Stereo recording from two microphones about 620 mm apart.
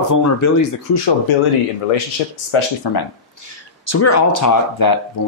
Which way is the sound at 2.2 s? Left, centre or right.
Left.